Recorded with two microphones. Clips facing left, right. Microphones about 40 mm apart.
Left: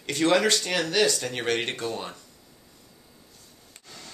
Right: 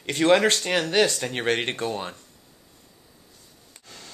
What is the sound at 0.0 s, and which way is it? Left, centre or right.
Speech, right.